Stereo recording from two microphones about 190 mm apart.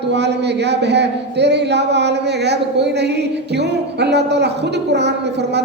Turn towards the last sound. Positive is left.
turn(degrees=-60)  # may be behind; listen again after turning